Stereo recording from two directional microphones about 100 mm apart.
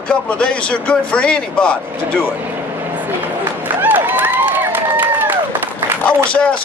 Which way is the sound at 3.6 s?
20° right (ahead or behind).